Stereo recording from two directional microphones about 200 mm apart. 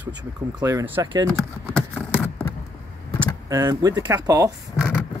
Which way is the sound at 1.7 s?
5° left (ahead or behind).